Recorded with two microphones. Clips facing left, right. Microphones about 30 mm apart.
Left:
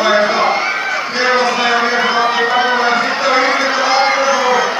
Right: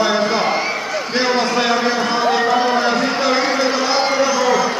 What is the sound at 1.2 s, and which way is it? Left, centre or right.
Run, centre.